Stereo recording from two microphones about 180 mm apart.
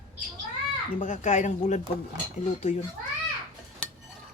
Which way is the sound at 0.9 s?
45° left (ahead or behind).